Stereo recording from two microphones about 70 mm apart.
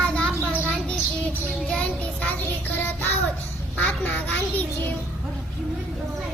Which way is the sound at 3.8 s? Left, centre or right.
Left.